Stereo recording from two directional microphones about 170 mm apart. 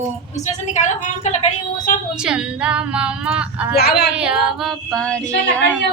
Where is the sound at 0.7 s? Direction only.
45° left (ahead or behind).